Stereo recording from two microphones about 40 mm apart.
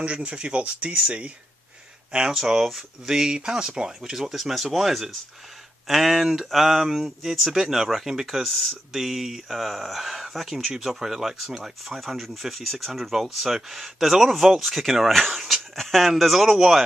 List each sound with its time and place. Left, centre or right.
0.0 s speech: right
2.3 s speech: centre
7.3 s speech: centre
8.5 s speech: centre
8.9 s speech: centre